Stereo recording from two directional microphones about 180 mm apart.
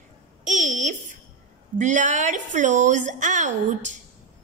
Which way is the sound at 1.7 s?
45° right (ahead or behind).